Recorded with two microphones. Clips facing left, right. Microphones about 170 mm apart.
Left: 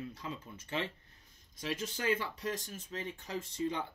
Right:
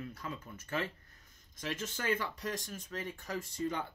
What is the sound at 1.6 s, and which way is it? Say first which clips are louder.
Speech: left 1 dB; 45° right (ahead or behind).